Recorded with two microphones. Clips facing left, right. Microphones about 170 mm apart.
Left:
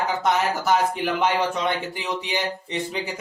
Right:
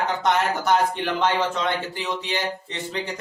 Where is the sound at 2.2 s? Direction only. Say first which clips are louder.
Even; 15° left (ahead or behind).